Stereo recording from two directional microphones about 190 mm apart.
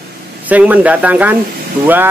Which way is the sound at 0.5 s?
10° right (ahead or behind).